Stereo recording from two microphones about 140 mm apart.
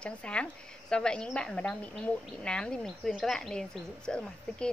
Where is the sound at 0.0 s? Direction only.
10° left (ahead or behind).